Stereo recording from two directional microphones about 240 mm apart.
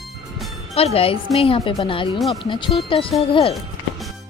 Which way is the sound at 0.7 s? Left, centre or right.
Left.